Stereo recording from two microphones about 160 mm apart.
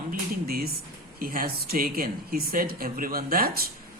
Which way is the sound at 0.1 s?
70° right (ahead or behind).